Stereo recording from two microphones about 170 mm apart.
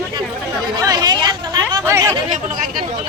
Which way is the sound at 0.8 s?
25° right (ahead or behind).